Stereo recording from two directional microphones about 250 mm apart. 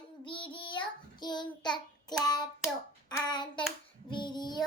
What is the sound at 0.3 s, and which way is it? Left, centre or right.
Child singing, left.